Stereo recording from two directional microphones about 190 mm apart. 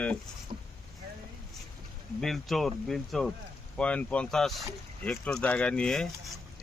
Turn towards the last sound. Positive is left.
turn(degrees=5)  # may be behind; listen again after turning